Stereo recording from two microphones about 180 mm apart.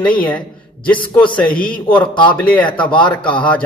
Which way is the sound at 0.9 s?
25° left (ahead or behind).